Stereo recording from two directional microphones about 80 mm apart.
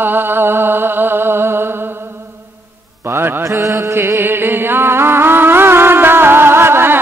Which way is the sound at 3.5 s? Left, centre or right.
Right.